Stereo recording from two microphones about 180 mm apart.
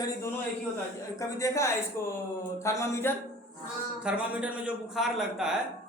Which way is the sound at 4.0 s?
5° right (ahead or behind).